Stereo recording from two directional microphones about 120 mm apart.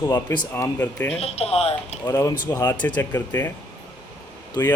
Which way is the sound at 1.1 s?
60° left (ahead or behind).